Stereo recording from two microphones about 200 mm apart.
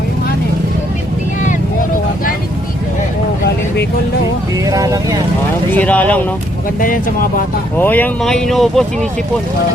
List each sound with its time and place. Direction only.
4.6 s speech: 15° right (ahead or behind)
5.7 s speech: 10° left (ahead or behind)
6.7 s speech: 45° left (ahead or behind)
7.8 s speech: 10° left (ahead or behind)